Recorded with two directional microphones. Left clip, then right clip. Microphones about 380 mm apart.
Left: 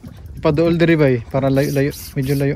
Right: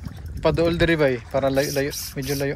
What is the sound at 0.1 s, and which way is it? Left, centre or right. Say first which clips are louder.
Speech: left 4 dB; centre.